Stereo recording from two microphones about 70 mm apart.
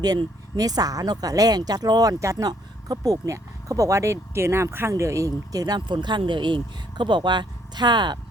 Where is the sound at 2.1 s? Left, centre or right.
Right.